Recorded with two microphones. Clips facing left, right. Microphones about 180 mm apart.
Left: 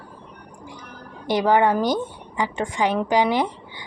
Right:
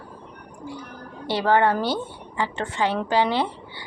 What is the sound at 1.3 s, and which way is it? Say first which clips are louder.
A woman's voice: left 2 dB; 15° left (ahead or behind).